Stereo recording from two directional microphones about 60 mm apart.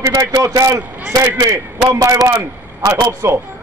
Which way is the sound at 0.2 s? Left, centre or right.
Right.